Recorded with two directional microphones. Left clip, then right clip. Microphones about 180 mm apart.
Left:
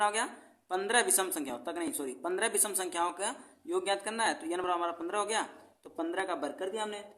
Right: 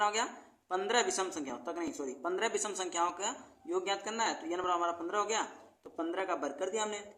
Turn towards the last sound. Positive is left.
turn(degrees=10)  # may be behind; listen again after turning